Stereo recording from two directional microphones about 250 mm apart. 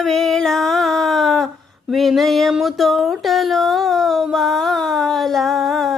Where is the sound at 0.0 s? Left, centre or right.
Centre.